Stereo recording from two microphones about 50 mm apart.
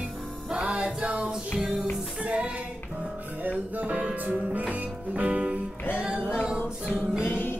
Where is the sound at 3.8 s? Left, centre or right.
Right.